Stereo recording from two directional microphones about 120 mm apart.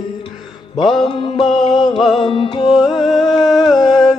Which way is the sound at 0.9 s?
45° left (ahead or behind).